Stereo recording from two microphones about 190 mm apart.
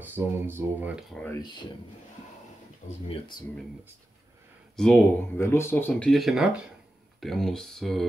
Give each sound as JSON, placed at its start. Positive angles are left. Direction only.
{"t": 0.0, "sound": "speech", "side_deg": -10}
{"t": 1.1, "sound": "speech", "side_deg": 10}
{"t": 1.4, "sound": "speech", "side_deg": 25}
{"t": 3.1, "sound": "speech", "side_deg": 25}
{"t": 4.7, "sound": "speech", "side_deg": 5}